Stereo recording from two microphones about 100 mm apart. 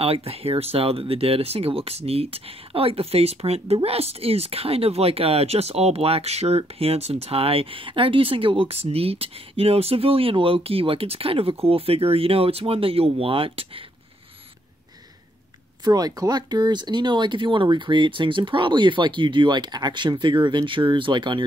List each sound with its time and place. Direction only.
0.0 s speech: 80° right
15.8 s speech: 40° right (ahead or behind)